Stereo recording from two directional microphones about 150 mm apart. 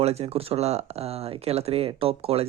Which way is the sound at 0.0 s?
45° right (ahead or behind).